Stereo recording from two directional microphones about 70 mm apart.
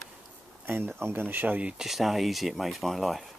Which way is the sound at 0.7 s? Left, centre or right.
Right.